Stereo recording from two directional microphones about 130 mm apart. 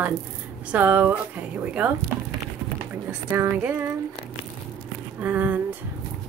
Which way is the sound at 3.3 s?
20° right (ahead or behind).